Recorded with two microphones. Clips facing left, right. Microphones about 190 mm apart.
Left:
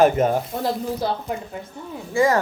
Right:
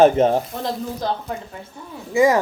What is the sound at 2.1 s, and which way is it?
Speech, 15° right (ahead or behind).